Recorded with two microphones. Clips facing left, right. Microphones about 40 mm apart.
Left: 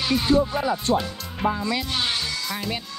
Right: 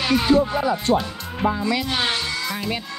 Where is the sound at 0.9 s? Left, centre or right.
Right.